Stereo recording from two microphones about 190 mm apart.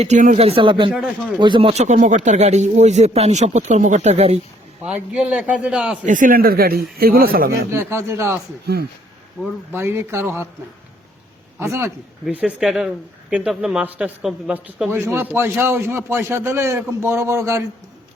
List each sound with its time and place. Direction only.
0.0 s speech: 40° right (ahead or behind)
4.8 s speech: 5° right (ahead or behind)
6.1 s speech: 45° right (ahead or behind)
7.7 s speech: 15° right (ahead or behind)
8.6 s speech: 55° right (ahead or behind)
9.4 s speech: 10° right (ahead or behind)
11.6 s speech: 15° right (ahead or behind)